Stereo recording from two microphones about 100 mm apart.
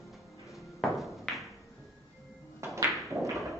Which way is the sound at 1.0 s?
Centre (ahead or behind).